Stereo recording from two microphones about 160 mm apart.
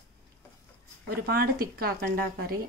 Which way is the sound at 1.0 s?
65° right (ahead or behind).